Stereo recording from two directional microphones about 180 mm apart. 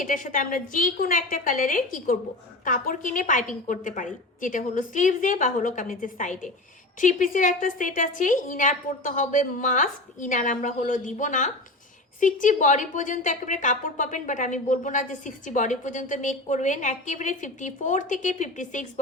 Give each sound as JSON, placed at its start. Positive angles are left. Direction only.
{"t": 0.0, "sound": "a woman's voice", "side_deg": 45}